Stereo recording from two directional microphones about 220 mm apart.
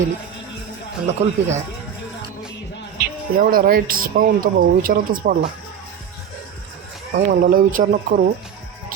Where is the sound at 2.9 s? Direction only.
40° right (ahead or behind).